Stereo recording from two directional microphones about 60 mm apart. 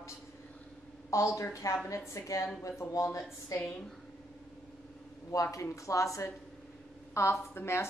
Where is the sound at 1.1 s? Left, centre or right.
Left.